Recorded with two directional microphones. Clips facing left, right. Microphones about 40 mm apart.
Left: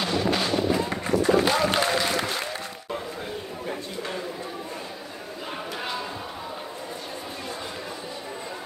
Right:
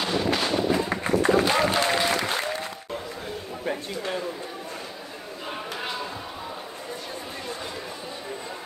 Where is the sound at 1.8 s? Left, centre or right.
Centre.